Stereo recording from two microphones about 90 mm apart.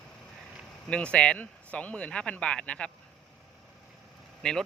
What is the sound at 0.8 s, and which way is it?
Speech, 10° left (ahead or behind).